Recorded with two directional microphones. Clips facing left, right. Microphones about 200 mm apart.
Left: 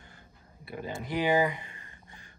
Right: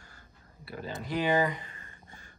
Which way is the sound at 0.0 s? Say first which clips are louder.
Left 2 dB; 20° left (ahead or behind).